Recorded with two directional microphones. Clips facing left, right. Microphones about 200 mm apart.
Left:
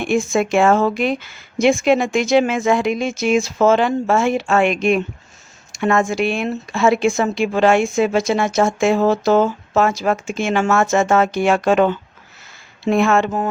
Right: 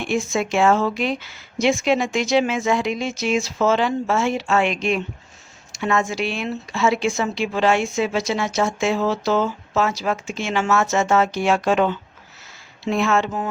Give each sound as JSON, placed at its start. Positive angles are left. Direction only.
{"t": 0.0, "sound": "speech", "side_deg": 50}